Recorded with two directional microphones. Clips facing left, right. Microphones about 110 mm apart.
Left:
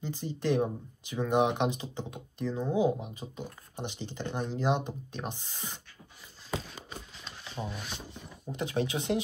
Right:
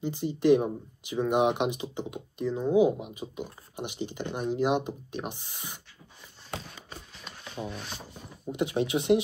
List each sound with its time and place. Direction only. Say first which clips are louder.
0.0 s speech: right 7 dB; 15° right (ahead or behind)
7.6 s speech: right 2 dB; centre (ahead or behind)
8.5 s speech: right 4 dB; 15° right (ahead or behind)